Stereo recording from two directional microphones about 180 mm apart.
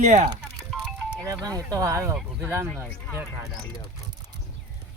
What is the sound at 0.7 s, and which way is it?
Music, centre (ahead or behind).